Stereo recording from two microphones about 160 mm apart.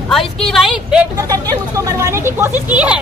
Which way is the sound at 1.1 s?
20° right (ahead or behind).